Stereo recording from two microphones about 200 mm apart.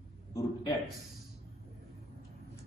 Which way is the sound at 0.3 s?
15° left (ahead or behind).